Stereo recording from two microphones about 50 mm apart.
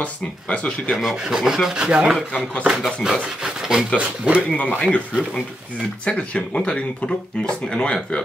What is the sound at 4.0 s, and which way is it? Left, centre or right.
Speech, right.